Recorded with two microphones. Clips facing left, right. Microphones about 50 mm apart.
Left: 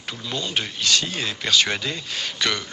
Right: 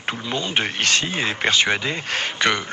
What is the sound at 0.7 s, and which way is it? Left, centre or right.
Speech, right.